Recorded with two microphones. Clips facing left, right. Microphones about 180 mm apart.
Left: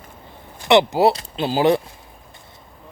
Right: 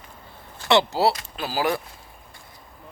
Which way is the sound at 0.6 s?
20° left (ahead or behind).